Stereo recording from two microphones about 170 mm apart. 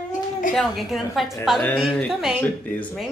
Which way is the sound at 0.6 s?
Centre (ahead or behind).